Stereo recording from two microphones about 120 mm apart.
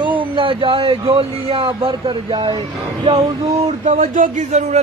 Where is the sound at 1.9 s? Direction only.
40° right (ahead or behind).